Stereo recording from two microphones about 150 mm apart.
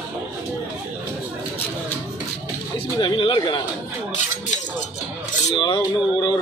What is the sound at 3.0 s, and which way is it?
Speech, 30° left (ahead or behind).